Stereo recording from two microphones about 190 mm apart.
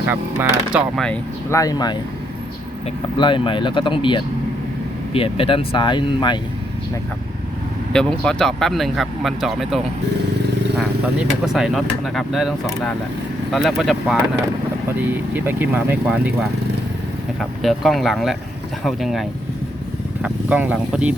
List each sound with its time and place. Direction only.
0.0 s speech: 10° right (ahead or behind); by 2.0 s 20° left (ahead or behind)
3.2 s speech: 25° left (ahead or behind)
7.9 s speech: 5° left (ahead or behind)
11.4 s speech: centre (ahead or behind)
17.6 s speech: centre (ahead or behind)